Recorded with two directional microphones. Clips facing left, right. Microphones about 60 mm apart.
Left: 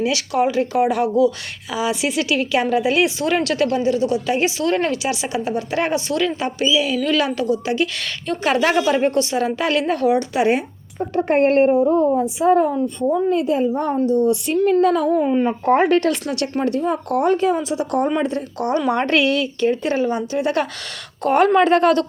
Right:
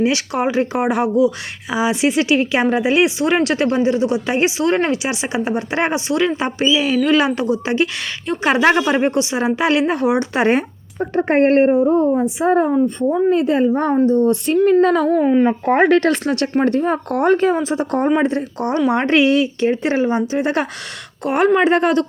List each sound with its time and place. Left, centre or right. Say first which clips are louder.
0.0 s a woman's voice: right 1 dB; right
10.3 s speech: right 2 dB; right
11.1 s speech: right 2 dB; right
13.3 s speech: right 3 dB; right
13.9 s speech: right 1 dB; right
15.2 s a woman's voice: right 3 dB; right
16.0 s a woman's voice: right 3 dB; right
21.2 s a woman's voice: even; centre